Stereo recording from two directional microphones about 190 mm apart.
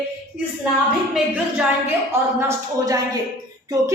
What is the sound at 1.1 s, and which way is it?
Speech, 5° right (ahead or behind).